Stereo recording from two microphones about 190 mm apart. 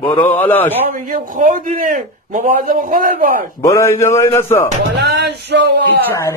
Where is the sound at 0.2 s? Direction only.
10° left (ahead or behind).